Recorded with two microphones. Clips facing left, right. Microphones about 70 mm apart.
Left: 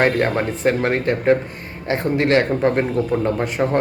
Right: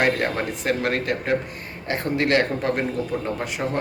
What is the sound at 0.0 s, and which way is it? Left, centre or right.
Speech, left.